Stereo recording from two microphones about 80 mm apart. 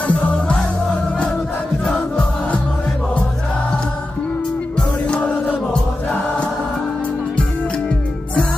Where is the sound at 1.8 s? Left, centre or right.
Centre.